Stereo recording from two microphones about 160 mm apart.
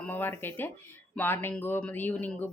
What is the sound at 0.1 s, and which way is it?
Speech, 15° left (ahead or behind).